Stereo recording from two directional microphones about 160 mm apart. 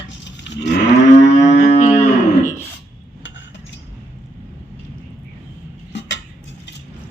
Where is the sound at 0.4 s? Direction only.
90° left.